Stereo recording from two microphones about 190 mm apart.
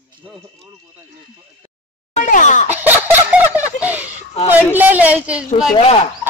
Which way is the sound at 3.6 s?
10° right (ahead or behind).